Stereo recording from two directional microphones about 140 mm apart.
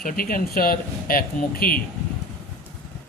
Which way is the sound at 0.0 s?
90° left.